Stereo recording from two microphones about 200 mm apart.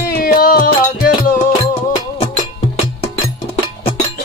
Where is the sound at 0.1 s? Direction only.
45° left (ahead or behind).